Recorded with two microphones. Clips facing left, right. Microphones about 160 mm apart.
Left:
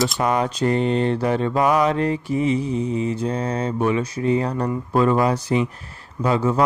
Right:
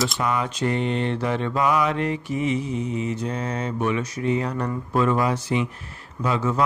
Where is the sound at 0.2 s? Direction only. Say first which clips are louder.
Left 4 dB; 40° left (ahead or behind).